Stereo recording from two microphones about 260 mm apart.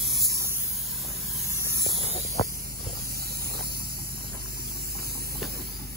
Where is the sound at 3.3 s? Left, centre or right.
Right.